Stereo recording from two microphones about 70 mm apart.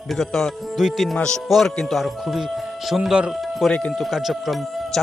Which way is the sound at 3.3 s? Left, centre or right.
Centre.